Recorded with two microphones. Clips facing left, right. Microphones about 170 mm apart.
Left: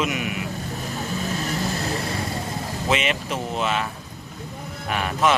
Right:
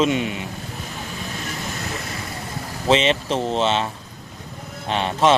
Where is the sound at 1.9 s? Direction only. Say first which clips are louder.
Left 4 dB; 30° left (ahead or behind).